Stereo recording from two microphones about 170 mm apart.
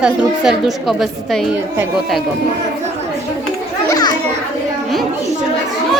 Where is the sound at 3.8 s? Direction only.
20° left (ahead or behind).